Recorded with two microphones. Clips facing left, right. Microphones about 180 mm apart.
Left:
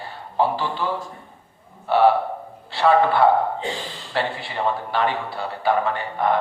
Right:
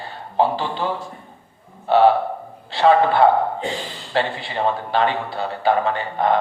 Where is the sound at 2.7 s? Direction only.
25° right (ahead or behind).